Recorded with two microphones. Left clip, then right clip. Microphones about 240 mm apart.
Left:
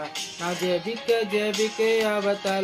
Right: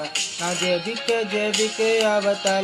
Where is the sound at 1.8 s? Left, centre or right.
Centre.